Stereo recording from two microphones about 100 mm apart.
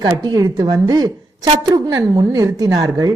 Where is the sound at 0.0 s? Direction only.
40° right (ahead or behind).